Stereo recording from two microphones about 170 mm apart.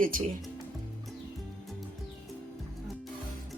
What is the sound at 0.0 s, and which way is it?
Speech, 55° right (ahead or behind).